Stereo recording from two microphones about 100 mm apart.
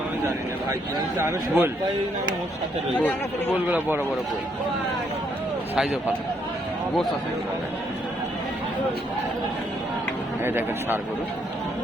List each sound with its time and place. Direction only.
1.2 s speech: 25° right (ahead or behind)
3.0 s speech: 20° left (ahead or behind)
3.7 s speech: 20° right (ahead or behind)
10.4 s speech: 20° right (ahead or behind)